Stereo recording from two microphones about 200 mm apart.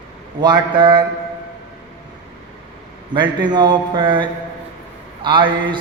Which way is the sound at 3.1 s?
25° right (ahead or behind).